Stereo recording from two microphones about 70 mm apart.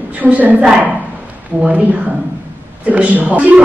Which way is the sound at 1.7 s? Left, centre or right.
Right.